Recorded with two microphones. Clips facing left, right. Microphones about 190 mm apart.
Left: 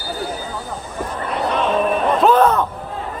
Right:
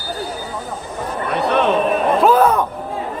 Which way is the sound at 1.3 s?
65° right (ahead or behind).